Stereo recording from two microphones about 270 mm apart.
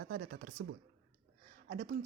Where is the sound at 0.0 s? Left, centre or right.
Right.